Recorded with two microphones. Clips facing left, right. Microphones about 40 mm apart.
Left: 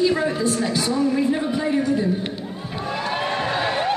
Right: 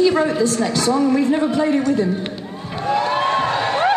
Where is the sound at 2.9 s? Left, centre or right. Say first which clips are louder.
Right 7 dB; centre.